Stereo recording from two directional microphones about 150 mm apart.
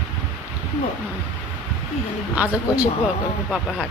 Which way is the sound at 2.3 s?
10° right (ahead or behind).